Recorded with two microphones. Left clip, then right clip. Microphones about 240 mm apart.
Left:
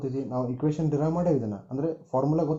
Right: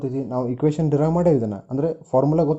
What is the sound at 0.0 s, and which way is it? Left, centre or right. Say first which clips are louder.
Speech: right 5 dB; right.